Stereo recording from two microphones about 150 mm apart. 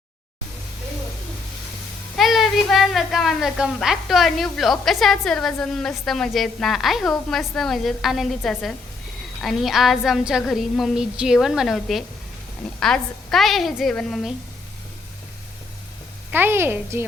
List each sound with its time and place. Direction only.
2.1 s a woman's voice: centre (ahead or behind)
9.4 s a woman's voice: centre (ahead or behind)
16.3 s a woman's voice: 15° right (ahead or behind)